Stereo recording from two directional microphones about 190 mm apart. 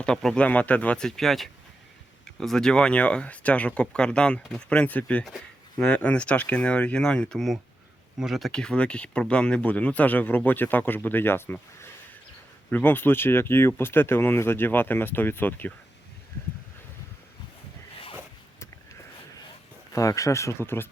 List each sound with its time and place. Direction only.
0.0 s speech: 5° left (ahead or behind)
19.9 s speech: 15° left (ahead or behind)